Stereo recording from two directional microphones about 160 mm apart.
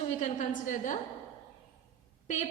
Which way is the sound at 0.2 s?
50° left (ahead or behind).